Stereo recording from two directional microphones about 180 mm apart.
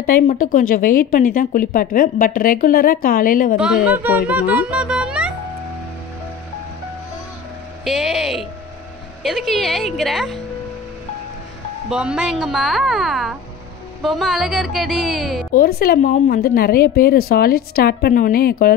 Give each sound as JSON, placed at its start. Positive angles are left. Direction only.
{"t": 0.0, "sound": "a woman's voice", "side_deg": 50}
{"t": 3.5, "sound": "speech", "side_deg": -5}
{"t": 7.8, "sound": "a woman's voice", "side_deg": 0}
{"t": 11.9, "sound": "a woman's voice", "side_deg": -5}
{"t": 15.5, "sound": "a woman's voice", "side_deg": 55}